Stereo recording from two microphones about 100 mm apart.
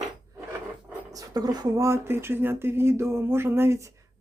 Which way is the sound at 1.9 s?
25° right (ahead or behind).